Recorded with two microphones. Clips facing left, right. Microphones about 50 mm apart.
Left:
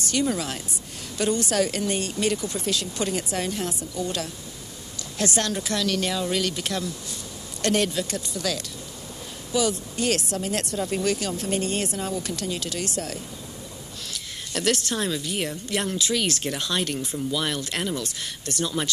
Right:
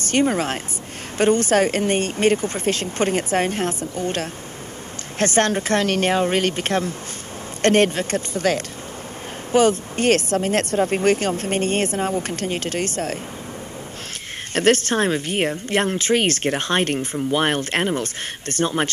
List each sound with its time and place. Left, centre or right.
0.0 s a woman's voice: right
14.5 s a woman's voice: right